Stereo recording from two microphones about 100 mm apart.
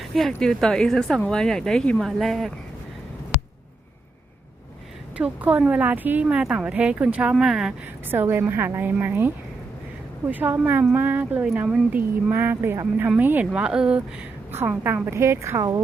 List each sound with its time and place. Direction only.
0.0 s speech: centre (ahead or behind)
5.1 s a woman's voice: 15° right (ahead or behind)
8.1 s speech: 20° right (ahead or behind)
10.3 s a woman's voice: 20° right (ahead or behind)
15.0 s speech: 25° right (ahead or behind)